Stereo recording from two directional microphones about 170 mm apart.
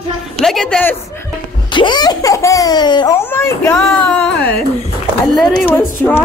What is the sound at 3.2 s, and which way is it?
A child's voice, 15° left (ahead or behind).